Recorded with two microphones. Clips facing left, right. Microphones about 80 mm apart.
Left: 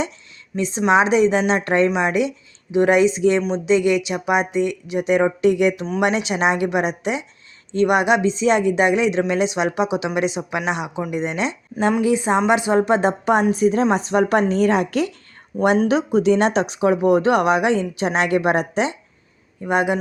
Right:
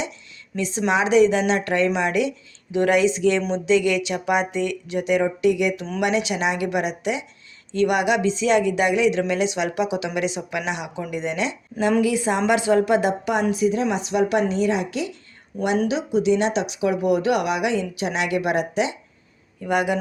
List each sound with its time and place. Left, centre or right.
0.5 s speech: left
15.5 s speech: left
15.9 s speech: left
19.6 s speech: left